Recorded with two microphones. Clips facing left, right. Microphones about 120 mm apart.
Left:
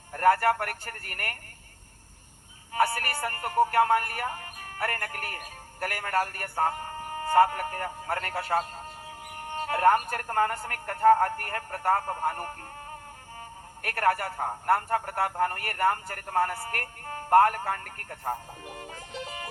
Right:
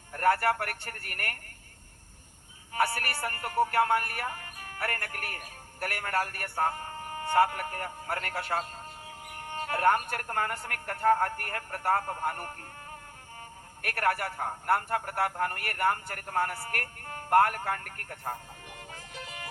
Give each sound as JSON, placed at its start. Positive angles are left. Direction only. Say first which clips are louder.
{"t": 0.1, "sound": "speech", "louder": "left 3 dB", "side_deg": 40}
{"t": 2.7, "sound": "a man's voice", "louder": "left 3 dB", "side_deg": 40}
{"t": 13.8, "sound": "a man's voice", "louder": "left 3 dB", "side_deg": 35}
{"t": 18.8, "sound": "music", "louder": "left 5 dB", "side_deg": 35}